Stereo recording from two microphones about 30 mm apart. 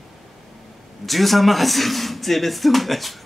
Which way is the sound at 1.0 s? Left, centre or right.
Centre.